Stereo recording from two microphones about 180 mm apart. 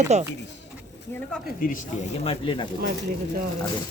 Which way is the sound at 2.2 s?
30° left (ahead or behind).